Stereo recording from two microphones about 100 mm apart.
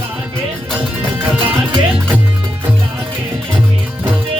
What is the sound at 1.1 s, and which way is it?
Music, 20° right (ahead or behind).